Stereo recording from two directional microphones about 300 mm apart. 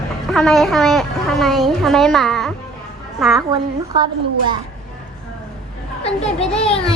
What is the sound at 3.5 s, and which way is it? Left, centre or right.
A woman's voice, centre.